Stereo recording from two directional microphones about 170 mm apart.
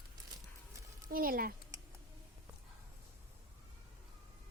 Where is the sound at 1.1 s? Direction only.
60° right (ahead or behind).